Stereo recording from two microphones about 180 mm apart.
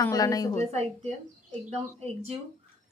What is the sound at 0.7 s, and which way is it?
Speech, 40° right (ahead or behind).